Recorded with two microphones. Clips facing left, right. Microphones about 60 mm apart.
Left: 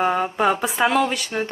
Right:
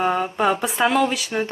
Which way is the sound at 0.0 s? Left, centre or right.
Centre.